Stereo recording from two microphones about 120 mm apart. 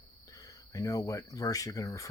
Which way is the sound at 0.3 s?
30° left (ahead or behind).